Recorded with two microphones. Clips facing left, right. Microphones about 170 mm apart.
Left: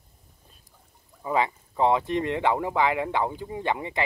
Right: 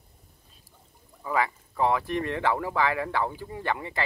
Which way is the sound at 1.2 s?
20° left (ahead or behind).